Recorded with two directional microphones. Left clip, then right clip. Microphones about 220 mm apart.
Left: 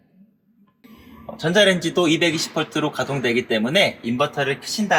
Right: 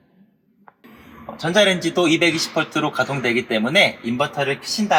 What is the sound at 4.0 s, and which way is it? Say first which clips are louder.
Speech: even; 45° right (ahead or behind).